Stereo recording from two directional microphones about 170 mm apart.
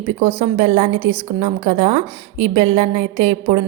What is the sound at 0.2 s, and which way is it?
A woman's voice, 40° right (ahead or behind).